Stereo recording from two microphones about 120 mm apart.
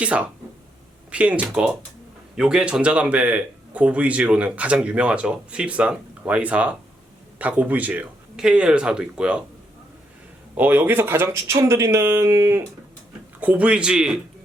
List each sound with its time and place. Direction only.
0.0 s speech: 10° right (ahead or behind)
10.6 s speech: 15° right (ahead or behind)
13.4 s speech: 10° right (ahead or behind)